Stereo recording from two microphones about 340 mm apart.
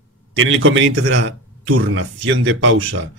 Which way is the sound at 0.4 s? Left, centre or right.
Right.